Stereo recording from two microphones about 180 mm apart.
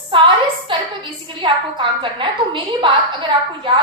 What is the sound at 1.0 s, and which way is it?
A woman's voice, 25° right (ahead or behind).